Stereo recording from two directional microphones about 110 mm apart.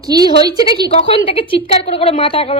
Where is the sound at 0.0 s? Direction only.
35° right (ahead or behind).